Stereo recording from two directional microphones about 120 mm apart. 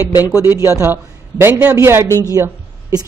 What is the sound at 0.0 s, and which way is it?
Speech, 25° left (ahead or behind).